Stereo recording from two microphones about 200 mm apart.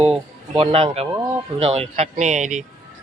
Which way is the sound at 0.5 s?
30° right (ahead or behind).